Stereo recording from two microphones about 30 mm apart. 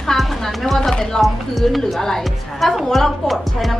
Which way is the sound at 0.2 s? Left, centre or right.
Centre.